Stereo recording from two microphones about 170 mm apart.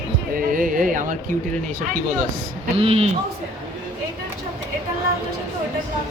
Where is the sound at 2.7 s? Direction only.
35° right (ahead or behind).